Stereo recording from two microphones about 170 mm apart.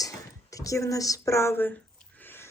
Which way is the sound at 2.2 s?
15° left (ahead or behind).